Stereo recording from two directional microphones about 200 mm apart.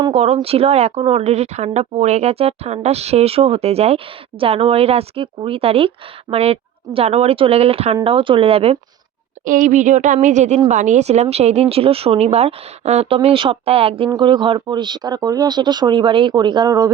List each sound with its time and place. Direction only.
0.0 s speech: 30° right (ahead or behind)
9.4 s speech: 40° right (ahead or behind); by 16.9 s 20° right (ahead or behind)